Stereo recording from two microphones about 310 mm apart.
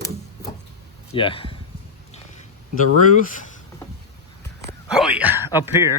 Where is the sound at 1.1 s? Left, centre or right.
Centre.